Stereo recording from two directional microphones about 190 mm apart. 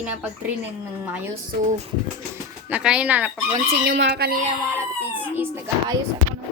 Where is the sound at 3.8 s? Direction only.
60° right (ahead or behind).